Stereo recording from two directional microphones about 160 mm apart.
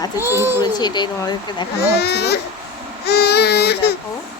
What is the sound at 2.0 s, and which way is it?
Speech, 90° left.